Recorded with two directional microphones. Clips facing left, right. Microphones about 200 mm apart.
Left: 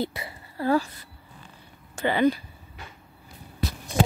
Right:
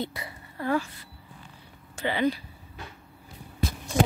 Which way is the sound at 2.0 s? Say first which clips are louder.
Left 4 dB; 45° left (ahead or behind).